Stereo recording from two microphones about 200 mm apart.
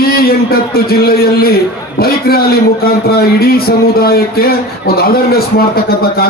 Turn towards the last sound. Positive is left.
turn(degrees=50)  # may be behind; listen again after turning